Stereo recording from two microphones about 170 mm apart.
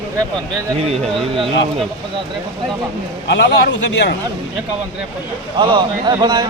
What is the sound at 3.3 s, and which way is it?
Speech, 90° left.